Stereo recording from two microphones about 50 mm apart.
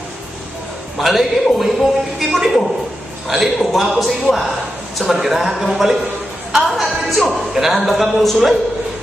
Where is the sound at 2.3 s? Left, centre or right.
Centre.